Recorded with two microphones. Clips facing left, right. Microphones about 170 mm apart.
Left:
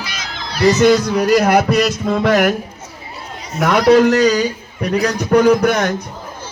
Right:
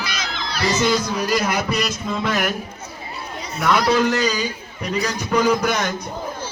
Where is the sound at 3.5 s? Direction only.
75° left (ahead or behind).